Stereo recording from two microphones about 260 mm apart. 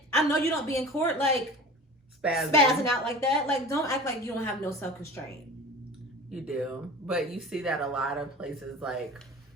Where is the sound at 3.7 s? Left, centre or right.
Centre.